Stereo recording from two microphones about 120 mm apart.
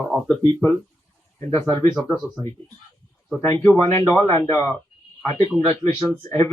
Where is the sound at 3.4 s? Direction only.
25° left (ahead or behind).